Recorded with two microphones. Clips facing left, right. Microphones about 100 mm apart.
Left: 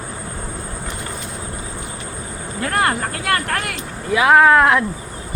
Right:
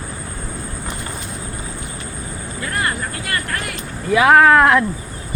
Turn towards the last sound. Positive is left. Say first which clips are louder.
# right 1 dB
turn(degrees=10)  # may be behind; listen again after turning